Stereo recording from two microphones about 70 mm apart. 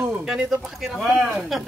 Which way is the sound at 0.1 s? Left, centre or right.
Centre.